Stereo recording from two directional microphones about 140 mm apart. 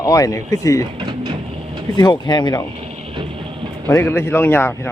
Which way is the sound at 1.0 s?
40° right (ahead or behind).